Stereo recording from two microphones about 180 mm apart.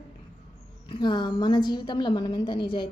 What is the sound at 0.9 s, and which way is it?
A woman's voice, 25° left (ahead or behind).